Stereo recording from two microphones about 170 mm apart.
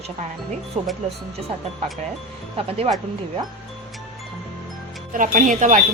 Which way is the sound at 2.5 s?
35° right (ahead or behind).